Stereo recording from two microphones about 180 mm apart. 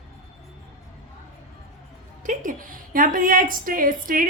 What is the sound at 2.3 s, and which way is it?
A woman's voice, 50° right (ahead or behind).